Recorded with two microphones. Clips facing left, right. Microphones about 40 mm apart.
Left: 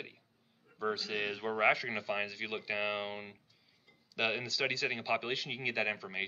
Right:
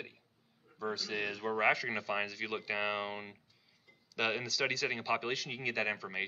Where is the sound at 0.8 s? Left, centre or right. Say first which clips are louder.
Left 2 dB; left.